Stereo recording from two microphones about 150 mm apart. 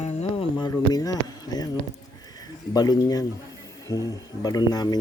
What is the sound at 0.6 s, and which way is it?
Speech, 25° left (ahead or behind).